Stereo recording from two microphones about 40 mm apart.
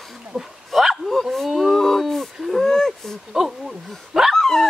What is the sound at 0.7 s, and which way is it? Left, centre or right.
Bow-wow, centre.